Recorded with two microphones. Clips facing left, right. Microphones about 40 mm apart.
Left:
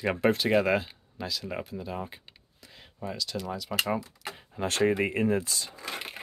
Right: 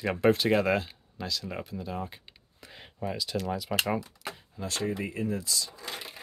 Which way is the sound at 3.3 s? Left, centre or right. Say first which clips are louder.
Right 1 dB; centre.